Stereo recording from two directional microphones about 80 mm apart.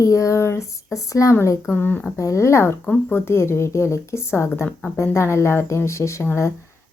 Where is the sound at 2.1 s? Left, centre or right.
Left.